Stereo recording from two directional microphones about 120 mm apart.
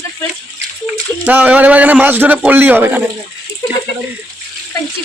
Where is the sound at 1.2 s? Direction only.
15° right (ahead or behind).